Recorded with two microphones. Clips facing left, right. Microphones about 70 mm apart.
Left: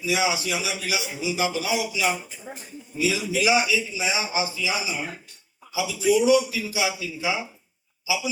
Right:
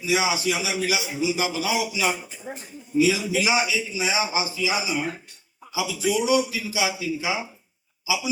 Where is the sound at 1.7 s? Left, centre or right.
Right.